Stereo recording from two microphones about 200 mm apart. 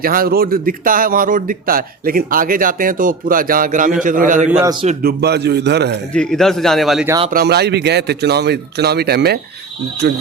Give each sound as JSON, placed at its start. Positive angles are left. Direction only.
{"t": 0.0, "sound": "a man's voice", "side_deg": -45}
{"t": 4.6, "sound": "speech", "side_deg": -20}
{"t": 5.0, "sound": "speech", "side_deg": -55}
{"t": 6.1, "sound": "speech", "side_deg": 0}
{"t": 7.3, "sound": "speech", "side_deg": -50}